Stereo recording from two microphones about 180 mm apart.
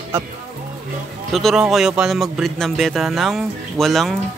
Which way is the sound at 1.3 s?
Centre (ahead or behind).